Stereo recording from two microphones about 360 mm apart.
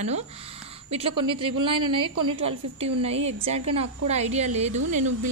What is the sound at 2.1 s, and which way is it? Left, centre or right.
Speech, right.